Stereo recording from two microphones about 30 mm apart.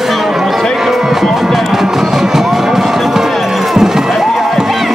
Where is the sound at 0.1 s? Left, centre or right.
Centre.